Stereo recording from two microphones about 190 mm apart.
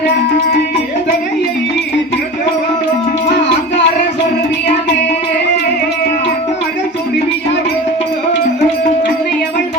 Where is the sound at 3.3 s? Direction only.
65° left (ahead or behind).